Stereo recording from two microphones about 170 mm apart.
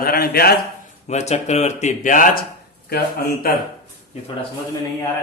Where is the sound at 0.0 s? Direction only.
65° left (ahead or behind).